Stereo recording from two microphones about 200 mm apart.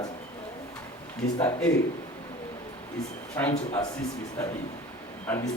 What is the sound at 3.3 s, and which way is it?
Speech, 10° left (ahead or behind).